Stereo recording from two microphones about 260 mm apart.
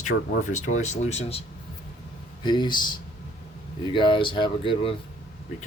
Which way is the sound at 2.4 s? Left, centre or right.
Centre.